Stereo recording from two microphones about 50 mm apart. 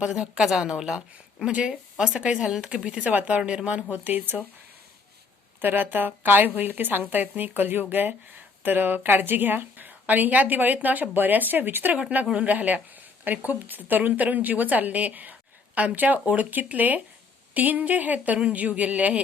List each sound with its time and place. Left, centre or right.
0.0 s a woman's voice: centre
3.0 s speech: right
3.9 s a woman's voice: right
5.5 s a woman's voice: right
11.9 s a woman's voice: right